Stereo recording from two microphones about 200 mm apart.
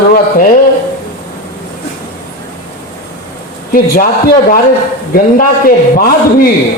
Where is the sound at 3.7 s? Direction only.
45° left (ahead or behind).